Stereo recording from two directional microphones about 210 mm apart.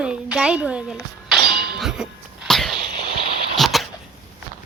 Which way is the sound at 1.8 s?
5° right (ahead or behind).